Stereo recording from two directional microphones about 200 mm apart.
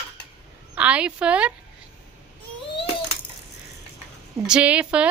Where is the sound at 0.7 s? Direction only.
5° right (ahead or behind).